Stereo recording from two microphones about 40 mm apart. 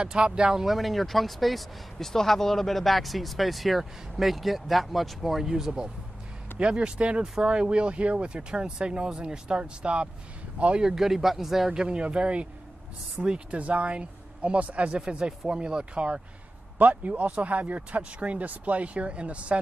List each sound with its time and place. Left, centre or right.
0.0 s speech: right
0.7 s speech: centre
6.6 s speech: right
10.8 s speech: centre
11.7 s speech: right
15.0 s speech: right
16.7 s a man's voice: right